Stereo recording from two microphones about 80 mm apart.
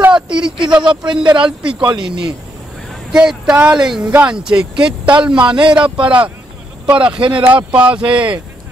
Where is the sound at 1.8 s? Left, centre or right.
Right.